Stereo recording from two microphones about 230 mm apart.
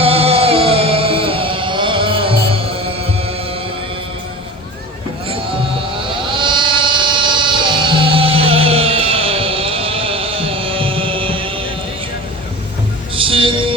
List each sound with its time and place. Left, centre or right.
0.0 s music: right
5.9 s vehicle: right
13.1 s a sound: right